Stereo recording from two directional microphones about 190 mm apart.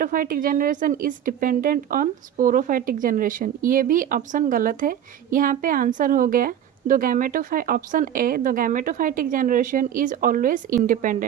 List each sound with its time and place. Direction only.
0.0 s a woman's voice: 45° right (ahead or behind)